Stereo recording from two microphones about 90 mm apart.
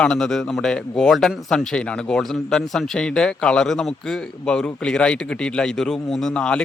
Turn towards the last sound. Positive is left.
turn(degrees=10)  # may be behind; listen again after turning